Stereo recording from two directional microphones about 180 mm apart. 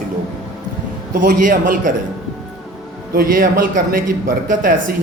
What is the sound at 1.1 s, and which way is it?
Speech, 50° right (ahead or behind).